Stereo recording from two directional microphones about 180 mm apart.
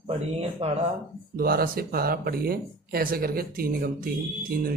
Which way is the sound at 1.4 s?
55° right (ahead or behind).